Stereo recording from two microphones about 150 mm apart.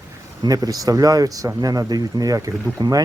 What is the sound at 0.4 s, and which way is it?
Speech, 25° right (ahead or behind).